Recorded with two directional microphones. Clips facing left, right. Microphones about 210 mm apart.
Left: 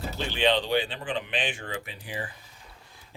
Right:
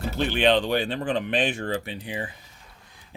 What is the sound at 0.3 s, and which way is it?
Speech, 50° right (ahead or behind).